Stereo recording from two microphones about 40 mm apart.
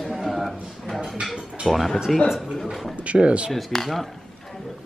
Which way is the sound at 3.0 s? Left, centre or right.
Right.